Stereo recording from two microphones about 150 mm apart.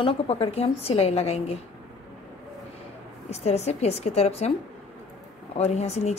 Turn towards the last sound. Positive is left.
turn(degrees=45)  # may be behind; listen again after turning